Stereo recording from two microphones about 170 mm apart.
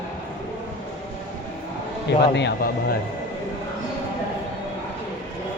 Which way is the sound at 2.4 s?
75° left (ahead or behind).